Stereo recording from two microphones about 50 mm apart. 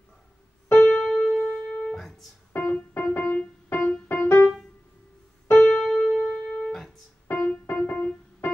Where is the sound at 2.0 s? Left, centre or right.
Centre.